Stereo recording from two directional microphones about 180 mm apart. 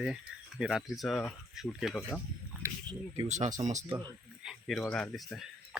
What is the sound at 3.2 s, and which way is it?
Speech, 40° right (ahead or behind).